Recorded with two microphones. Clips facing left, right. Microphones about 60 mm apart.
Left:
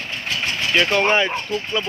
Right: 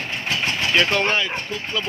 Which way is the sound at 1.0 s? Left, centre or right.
Centre.